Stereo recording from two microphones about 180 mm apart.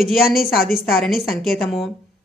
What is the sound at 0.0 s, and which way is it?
Speech, centre (ahead or behind).